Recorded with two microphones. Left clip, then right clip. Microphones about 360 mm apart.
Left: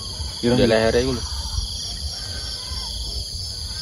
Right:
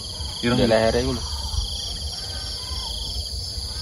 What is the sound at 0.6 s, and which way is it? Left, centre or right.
Speech, right.